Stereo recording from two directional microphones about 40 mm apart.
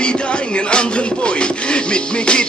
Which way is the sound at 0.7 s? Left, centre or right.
Left.